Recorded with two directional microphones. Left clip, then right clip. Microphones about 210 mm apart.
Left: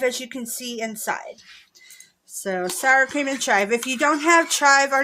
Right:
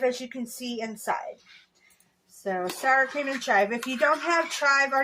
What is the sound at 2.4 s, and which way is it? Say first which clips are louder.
A woman's voice: left 5 dB; 50° left (ahead or behind).